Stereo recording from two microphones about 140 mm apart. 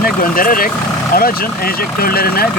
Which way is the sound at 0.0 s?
90° left.